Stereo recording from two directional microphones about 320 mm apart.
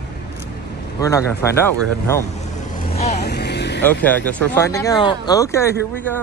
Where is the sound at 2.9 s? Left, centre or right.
Left.